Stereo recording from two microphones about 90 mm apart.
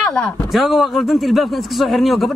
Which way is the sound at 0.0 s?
5° left (ahead or behind).